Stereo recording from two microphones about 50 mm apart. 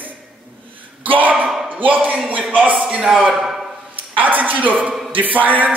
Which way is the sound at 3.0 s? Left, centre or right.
Centre.